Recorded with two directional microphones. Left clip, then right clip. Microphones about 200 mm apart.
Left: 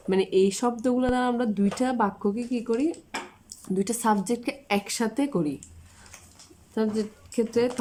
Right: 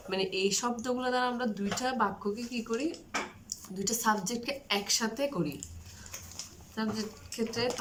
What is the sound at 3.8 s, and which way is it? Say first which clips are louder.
Speech: left 3 dB; 40° left (ahead or behind).